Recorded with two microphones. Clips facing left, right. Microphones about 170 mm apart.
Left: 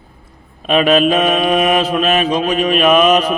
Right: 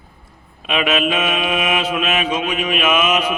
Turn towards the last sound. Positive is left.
turn(degrees=35)  # may be behind; listen again after turning